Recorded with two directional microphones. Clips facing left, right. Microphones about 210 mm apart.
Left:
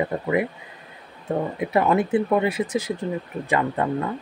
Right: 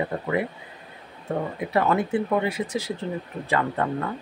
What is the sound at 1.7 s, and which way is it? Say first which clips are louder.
Speech: left 3 dB; 20° left (ahead or behind).